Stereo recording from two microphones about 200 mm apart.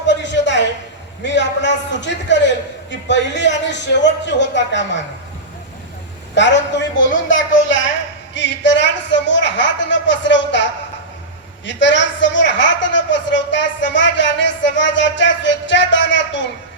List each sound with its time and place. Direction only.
0.1 s a sound: 65° left (ahead or behind)
1.2 s a man's voice: 65° left (ahead or behind)
6.3 s a man's voice: 65° left (ahead or behind)